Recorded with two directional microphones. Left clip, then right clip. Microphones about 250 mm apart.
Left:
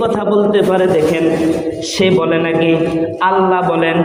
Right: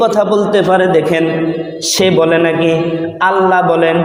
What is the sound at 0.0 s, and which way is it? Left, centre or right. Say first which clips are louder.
Speech: right 3 dB; right.